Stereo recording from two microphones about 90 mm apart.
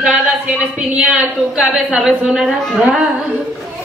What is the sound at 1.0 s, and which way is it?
Speech, 15° right (ahead or behind).